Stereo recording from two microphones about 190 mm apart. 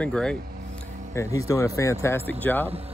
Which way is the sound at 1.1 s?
15° left (ahead or behind).